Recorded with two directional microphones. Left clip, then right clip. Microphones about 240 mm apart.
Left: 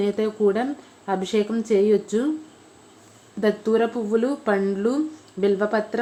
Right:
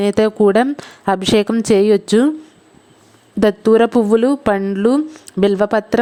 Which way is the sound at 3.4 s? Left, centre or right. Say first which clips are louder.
Right 9 dB; right.